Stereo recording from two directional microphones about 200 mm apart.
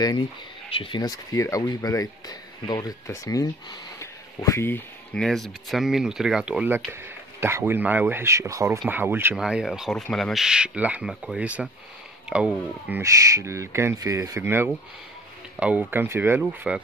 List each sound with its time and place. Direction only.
0.7 s speech: 25° left (ahead or behind); by 16.8 s 5° right (ahead or behind)